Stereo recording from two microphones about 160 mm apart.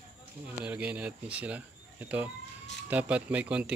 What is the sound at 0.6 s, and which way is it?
Speech, 10° right (ahead or behind).